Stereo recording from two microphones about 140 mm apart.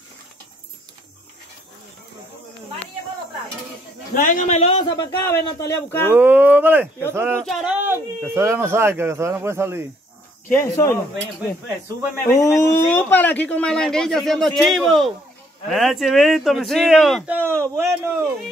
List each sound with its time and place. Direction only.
4.1 s speech: 70° left (ahead or behind)
4.7 s speech: 35° left (ahead or behind)
5.2 s speech: 20° left (ahead or behind)
6.1 s speech: 10° right (ahead or behind)
7.4 s a man's voice: centre (ahead or behind)
7.8 s speech: 15° right (ahead or behind)
10.5 s speech: 20° left (ahead or behind)
12.3 s a man's voice: 25° left (ahead or behind); by 17.2 s centre (ahead or behind)
17.3 s speech: 15° right (ahead or behind)